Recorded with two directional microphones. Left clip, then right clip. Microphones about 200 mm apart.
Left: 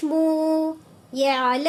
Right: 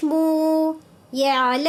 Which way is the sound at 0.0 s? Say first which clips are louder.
Right 2 dB; 20° right (ahead or behind).